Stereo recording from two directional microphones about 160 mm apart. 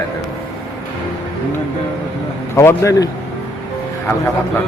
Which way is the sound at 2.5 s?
20° left (ahead or behind).